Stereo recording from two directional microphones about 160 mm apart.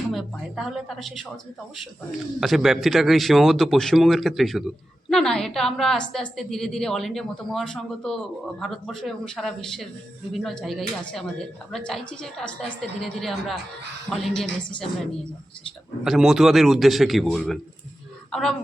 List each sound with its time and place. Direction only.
0.1 s a man's voice: centre (ahead or behind)
2.4 s a man's voice: centre (ahead or behind)
14.6 s a woman's voice: 30° left (ahead or behind)
16.0 s a man's voice: centre (ahead or behind)